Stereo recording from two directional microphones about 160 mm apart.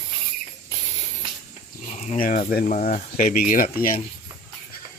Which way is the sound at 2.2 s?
60° left (ahead or behind).